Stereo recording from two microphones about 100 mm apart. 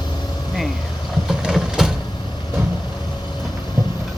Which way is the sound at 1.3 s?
5° right (ahead or behind).